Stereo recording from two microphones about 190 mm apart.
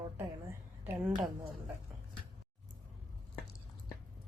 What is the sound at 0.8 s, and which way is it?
Speech, 10° right (ahead or behind).